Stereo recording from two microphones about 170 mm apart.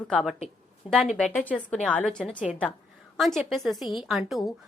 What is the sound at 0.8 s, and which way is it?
Speech, 35° left (ahead or behind).